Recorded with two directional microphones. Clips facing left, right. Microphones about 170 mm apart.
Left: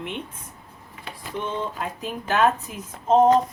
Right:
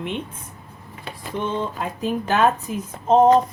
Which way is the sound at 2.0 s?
35° right (ahead or behind).